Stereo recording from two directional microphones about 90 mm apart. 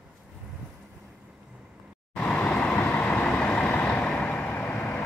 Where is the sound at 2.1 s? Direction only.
15° left (ahead or behind).